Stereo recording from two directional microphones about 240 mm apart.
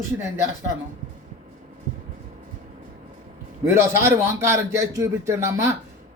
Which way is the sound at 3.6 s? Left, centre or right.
Centre.